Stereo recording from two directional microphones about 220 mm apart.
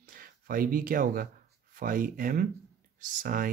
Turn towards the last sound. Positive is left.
turn(degrees=-40)  # may be behind; listen again after turning